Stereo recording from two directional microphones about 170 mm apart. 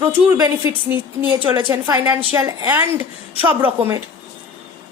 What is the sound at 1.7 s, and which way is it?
A woman's voice, 15° right (ahead or behind).